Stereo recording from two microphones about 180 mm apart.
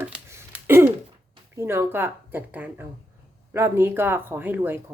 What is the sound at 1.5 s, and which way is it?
Speech, 15° right (ahead or behind).